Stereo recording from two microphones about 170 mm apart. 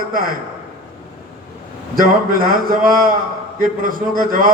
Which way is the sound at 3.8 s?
55° right (ahead or behind).